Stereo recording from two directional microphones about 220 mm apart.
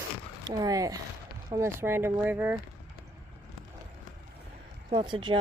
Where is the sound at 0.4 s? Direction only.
15° right (ahead or behind).